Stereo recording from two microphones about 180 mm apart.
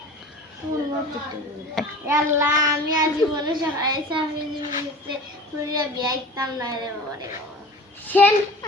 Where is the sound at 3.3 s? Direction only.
25° right (ahead or behind).